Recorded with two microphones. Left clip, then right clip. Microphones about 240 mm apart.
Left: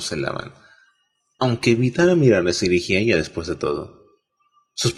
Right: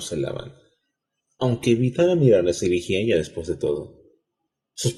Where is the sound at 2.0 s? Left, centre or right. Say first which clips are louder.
Left 1 dB; left.